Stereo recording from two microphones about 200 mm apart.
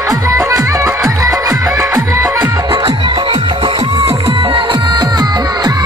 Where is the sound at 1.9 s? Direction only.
5° right (ahead or behind).